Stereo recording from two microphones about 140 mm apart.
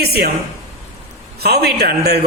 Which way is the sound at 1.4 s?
90° right.